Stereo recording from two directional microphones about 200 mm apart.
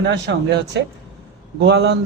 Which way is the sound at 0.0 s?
60° right (ahead or behind).